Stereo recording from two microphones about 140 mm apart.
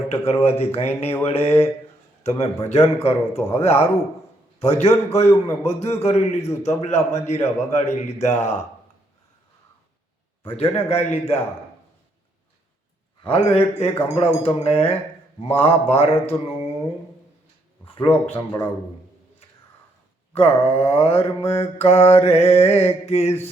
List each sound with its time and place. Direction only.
0.4 s a man's voice: 50° left (ahead or behind)
10.4 s a man's voice: 40° left (ahead or behind)
13.2 s a man's voice: 45° left (ahead or behind)
17.8 s a sound: 40° left (ahead or behind)
20.3 s a man's voice: 45° left (ahead or behind)